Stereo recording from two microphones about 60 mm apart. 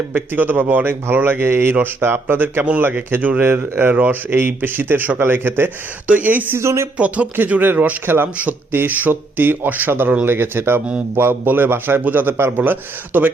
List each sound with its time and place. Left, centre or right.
0.1 s speech: right
6.6 s speech: right
7.3 s speech: right